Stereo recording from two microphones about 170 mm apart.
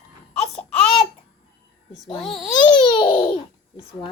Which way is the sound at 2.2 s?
Centre (ahead or behind).